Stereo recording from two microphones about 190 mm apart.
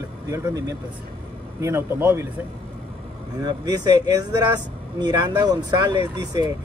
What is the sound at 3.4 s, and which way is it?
Speech, 20° right (ahead or behind).